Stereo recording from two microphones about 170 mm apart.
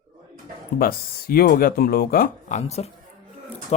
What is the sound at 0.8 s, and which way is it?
Speech, 60° left (ahead or behind).